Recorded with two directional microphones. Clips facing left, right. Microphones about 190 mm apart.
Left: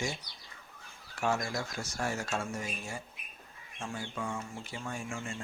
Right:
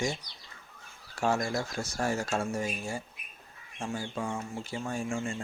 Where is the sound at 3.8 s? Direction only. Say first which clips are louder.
Right 4 dB; 30° right (ahead or behind).